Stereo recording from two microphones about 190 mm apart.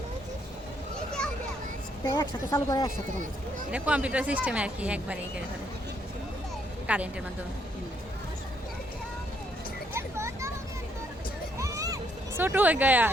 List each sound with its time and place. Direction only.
2.0 s a woman's voice: 15° left (ahead or behind)
3.7 s speech: 5° right (ahead or behind)
6.8 s a woman's voice: 5° right (ahead or behind)
9.9 s a sound: 15° right (ahead or behind)
11.5 s music: 15° right (ahead or behind)
12.4 s speech: 10° right (ahead or behind)